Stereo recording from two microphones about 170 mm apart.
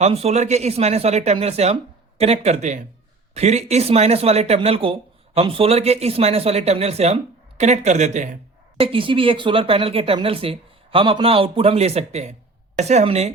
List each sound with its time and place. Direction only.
0.0 s speech: 40° right (ahead or behind)
8.8 s speech: 30° right (ahead or behind)